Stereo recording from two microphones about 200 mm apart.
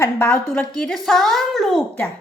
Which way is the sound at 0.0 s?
10° left (ahead or behind).